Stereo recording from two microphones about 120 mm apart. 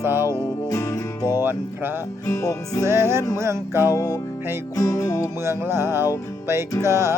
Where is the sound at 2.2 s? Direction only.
25° left (ahead or behind).